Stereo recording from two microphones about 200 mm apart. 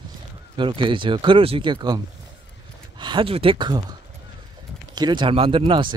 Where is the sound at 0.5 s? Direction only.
25° right (ahead or behind).